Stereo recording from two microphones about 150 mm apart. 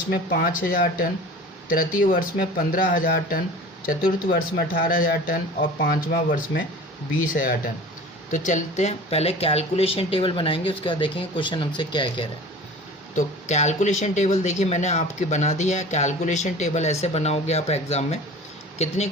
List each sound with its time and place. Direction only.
0.1 s a woman's voice: 80° left; by 12.2 s 30° left (ahead or behind)
13.1 s speech: 50° left (ahead or behind)